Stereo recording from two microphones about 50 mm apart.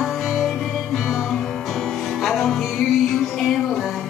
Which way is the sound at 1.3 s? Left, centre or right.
Centre.